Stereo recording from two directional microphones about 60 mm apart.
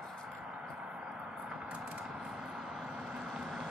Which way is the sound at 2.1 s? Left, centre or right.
Centre.